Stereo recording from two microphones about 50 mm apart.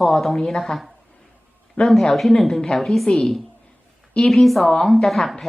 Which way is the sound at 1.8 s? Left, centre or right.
Left.